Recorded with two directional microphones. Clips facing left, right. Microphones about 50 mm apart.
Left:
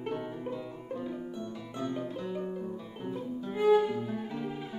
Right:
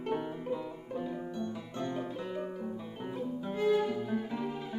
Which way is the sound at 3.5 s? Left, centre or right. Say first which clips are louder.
Left 5 dB; centre.